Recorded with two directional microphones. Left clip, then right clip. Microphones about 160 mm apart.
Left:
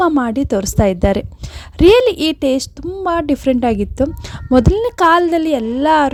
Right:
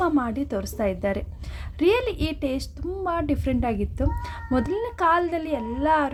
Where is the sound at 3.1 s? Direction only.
60° left (ahead or behind).